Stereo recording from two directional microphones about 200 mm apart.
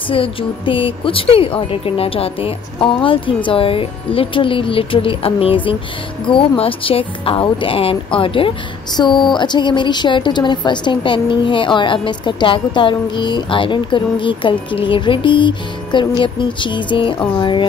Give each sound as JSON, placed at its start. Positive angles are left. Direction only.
{"t": 0.1, "sound": "a woman's voice", "side_deg": 25}